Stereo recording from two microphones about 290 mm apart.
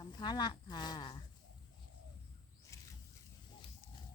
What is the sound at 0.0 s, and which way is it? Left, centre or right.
Speech, centre.